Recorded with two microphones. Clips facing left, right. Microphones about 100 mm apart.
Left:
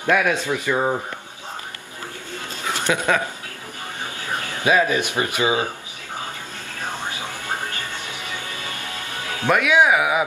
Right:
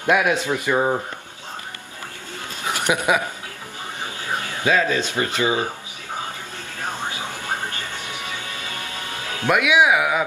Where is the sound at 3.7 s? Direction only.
20° right (ahead or behind).